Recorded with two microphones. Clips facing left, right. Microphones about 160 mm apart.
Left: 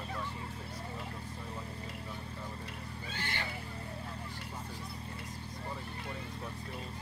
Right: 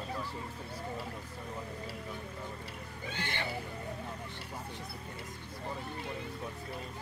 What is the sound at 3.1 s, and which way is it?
Speech, 20° right (ahead or behind).